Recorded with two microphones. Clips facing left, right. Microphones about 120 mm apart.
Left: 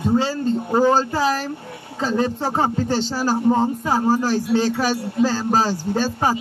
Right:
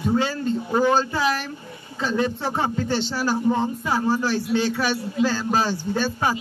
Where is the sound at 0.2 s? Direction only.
30° left (ahead or behind).